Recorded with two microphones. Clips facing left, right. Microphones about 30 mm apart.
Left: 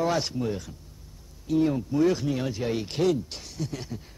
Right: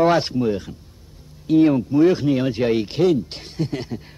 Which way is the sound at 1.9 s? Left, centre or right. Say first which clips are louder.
Right 8 dB; right.